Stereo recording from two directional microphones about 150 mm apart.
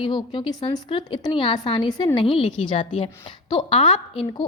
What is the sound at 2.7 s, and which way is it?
Speech, 50° left (ahead or behind).